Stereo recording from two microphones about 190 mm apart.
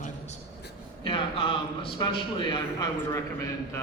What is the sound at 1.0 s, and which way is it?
A man's voice, 25° left (ahead or behind).